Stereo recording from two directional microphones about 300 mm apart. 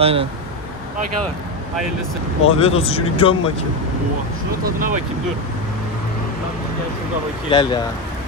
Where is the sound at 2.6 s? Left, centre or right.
Centre.